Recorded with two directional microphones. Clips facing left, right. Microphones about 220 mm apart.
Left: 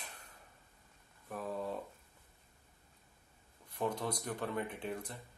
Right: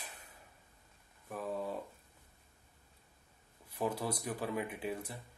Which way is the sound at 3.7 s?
5° right (ahead or behind).